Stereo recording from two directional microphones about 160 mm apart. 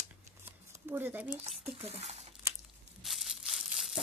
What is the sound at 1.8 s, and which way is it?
Speech, 40° right (ahead or behind).